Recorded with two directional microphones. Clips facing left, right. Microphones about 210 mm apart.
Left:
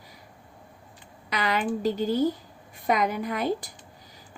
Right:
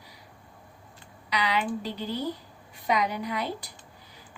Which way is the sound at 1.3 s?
50° left (ahead or behind).